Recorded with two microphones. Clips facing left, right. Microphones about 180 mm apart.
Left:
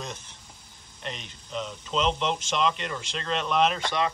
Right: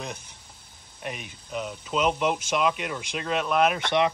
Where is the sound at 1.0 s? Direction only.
10° right (ahead or behind).